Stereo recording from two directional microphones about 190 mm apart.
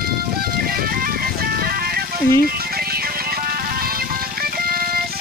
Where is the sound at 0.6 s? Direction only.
50° right (ahead or behind).